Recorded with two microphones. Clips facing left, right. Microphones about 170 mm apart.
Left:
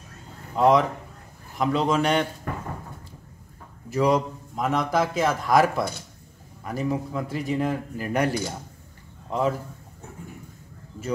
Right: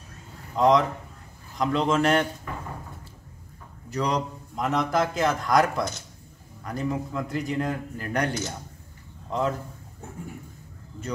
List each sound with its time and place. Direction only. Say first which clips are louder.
0.6 s a man's voice: left 1 dB; 5° left (ahead or behind)
2.5 s a sound: left 3 dB; 50° left (ahead or behind)
3.9 s a man's voice: left 5 dB; 5° left (ahead or behind)